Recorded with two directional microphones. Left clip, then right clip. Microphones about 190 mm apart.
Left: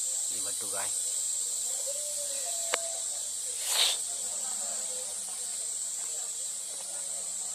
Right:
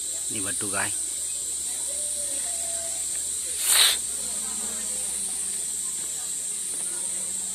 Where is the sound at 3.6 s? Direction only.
15° left (ahead or behind).